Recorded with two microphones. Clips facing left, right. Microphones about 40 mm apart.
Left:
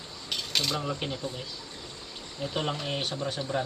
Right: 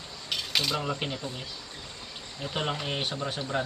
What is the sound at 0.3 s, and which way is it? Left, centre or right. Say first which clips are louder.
Cutlery: right 1 dB; centre.